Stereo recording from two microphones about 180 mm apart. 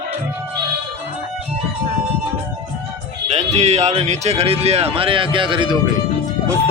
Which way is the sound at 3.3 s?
35° right (ahead or behind).